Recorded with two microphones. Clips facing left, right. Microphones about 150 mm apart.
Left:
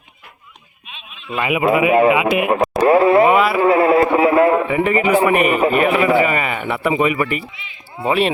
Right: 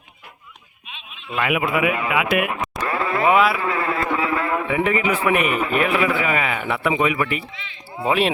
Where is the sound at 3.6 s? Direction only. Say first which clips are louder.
Left 11 dB; 30° left (ahead or behind).